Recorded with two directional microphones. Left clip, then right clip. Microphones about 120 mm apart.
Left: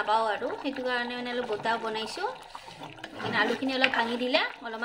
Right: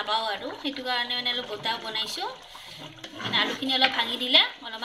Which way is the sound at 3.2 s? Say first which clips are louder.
Right 1 dB; 55° left (ahead or behind).